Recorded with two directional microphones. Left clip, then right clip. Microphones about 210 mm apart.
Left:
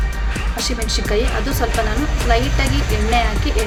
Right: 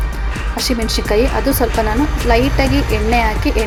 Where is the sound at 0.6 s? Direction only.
15° right (ahead or behind).